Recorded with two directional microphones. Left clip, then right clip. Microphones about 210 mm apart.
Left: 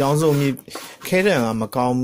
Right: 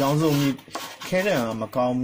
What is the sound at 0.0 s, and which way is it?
Speech, 45° left (ahead or behind).